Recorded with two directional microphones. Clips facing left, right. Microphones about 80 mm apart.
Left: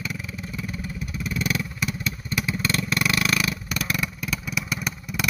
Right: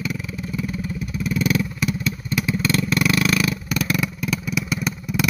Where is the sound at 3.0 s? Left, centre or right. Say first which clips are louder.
Right 3 dB; centre.